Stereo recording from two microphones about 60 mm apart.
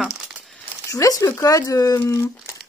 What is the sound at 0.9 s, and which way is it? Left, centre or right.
Speech, left.